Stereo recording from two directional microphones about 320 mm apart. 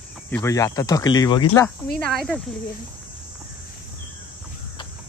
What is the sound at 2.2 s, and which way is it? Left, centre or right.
Speech, centre.